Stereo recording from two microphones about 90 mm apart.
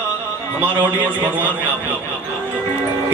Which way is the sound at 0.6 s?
20° right (ahead or behind).